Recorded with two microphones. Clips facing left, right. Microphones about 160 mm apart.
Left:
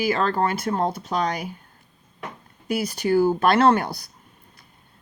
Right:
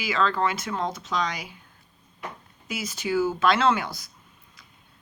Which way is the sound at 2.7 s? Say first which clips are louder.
Left 7 dB; 60° left (ahead or behind).